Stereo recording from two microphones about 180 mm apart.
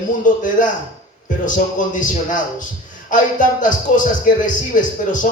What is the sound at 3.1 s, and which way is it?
Speech, 45° left (ahead or behind).